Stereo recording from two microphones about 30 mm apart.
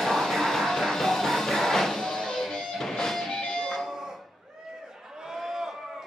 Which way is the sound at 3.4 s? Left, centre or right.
Left.